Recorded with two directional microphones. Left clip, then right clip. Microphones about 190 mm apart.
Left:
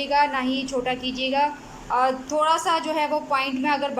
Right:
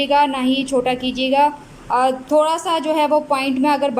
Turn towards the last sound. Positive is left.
turn(degrees=-20)  # may be behind; listen again after turning